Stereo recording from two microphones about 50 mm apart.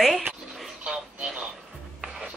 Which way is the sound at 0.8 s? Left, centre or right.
Right.